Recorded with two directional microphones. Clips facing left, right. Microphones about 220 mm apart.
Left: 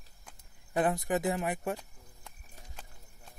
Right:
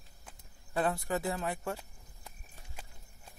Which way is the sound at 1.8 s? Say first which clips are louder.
Left 1 dB; 5° right (ahead or behind).